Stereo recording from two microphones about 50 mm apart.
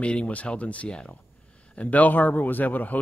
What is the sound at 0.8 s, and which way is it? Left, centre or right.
Speech, centre.